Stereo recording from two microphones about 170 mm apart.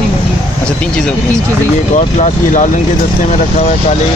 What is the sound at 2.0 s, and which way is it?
Speech, 45° left (ahead or behind).